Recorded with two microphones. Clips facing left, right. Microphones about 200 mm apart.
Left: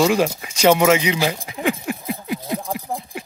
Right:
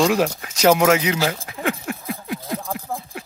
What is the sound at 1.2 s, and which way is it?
Speech, 15° left (ahead or behind).